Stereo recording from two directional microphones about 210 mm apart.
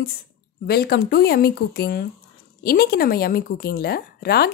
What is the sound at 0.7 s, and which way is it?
Speech, 50° left (ahead or behind).